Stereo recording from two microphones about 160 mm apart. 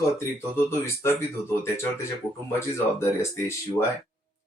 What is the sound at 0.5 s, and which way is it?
Speech, 15° left (ahead or behind).